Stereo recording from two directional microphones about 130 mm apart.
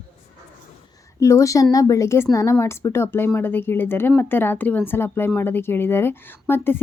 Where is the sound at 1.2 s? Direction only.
25° left (ahead or behind).